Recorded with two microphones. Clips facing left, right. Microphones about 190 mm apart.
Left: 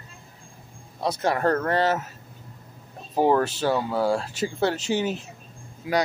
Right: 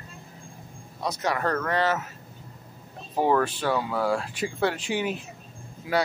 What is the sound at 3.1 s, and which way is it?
Speech, 30° left (ahead or behind).